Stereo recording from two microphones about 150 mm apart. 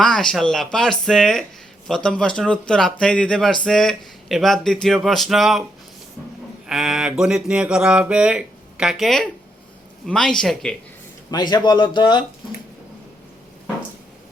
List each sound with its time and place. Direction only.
0.0 s speech: 5° left (ahead or behind)
6.7 s speech: 5° right (ahead or behind)
11.3 s speech: 25° left (ahead or behind)